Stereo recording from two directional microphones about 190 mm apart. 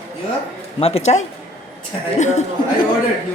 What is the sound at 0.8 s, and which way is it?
Speech, 30° left (ahead or behind).